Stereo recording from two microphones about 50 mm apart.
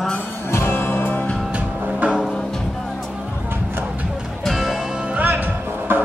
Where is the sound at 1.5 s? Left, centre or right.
Right.